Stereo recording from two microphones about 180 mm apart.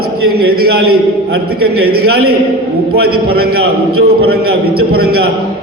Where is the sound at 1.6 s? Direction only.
60° right (ahead or behind).